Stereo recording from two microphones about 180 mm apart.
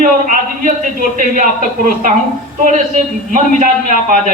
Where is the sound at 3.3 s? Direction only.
45° right (ahead or behind).